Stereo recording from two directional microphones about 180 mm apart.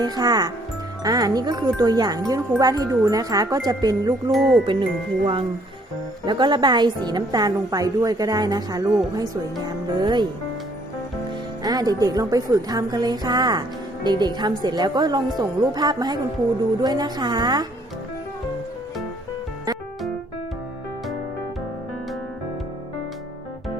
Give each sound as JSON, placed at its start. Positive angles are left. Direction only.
{"t": 0.0, "sound": "speech", "side_deg": -20}
{"t": 4.3, "sound": "speech", "side_deg": 0}
{"t": 4.6, "sound": "speech", "side_deg": -25}
{"t": 11.6, "sound": "speech", "side_deg": -20}